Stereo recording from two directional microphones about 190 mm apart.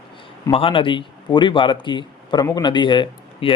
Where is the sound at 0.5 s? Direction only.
30° left (ahead or behind).